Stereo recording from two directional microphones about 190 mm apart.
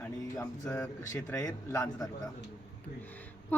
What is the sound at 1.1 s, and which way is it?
Speech, 20° left (ahead or behind).